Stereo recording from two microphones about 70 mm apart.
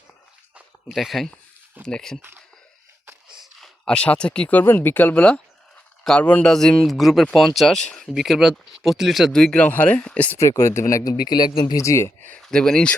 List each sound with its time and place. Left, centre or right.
0.9 s speech: centre
3.8 s speech: centre
6.5 s speech: centre
8.0 s speech: centre
9.3 s speech: centre
10.3 s speech: left
11.0 s speech: left
11.6 s speech: left
12.4 s speech: centre